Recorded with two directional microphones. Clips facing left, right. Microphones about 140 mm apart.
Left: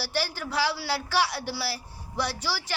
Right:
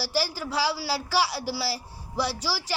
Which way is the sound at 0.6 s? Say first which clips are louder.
Even; 10° right (ahead or behind).